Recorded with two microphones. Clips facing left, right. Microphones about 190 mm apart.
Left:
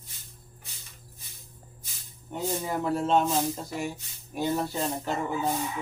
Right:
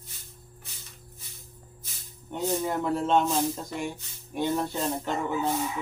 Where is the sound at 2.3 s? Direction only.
5° left (ahead or behind).